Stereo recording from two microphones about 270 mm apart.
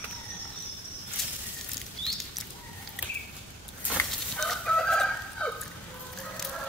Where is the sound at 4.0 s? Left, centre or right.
Centre.